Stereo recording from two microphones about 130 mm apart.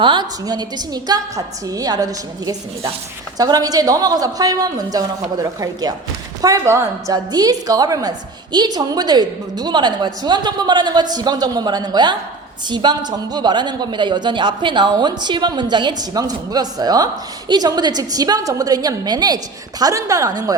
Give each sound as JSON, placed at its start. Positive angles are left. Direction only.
{"t": 0.0, "sound": "a woman's voice", "side_deg": -35}